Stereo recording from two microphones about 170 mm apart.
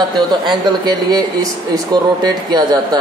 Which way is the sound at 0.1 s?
25° right (ahead or behind).